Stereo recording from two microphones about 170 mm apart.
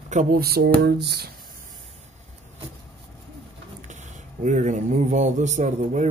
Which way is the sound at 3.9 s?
45° right (ahead or behind).